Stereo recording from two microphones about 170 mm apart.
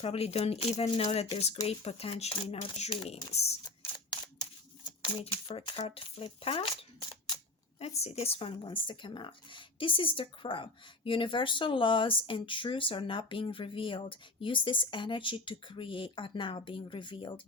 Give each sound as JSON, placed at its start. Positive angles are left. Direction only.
{"t": 0.0, "sound": "speech", "side_deg": 35}
{"t": 4.1, "sound": "shuffling cards", "side_deg": 25}
{"t": 5.9, "sound": "speech", "side_deg": 35}
{"t": 7.8, "sound": "speech", "side_deg": 40}